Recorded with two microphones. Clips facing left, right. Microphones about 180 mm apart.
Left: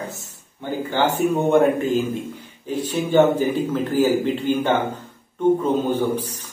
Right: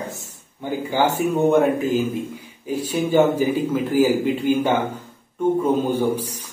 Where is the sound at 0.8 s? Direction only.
10° right (ahead or behind).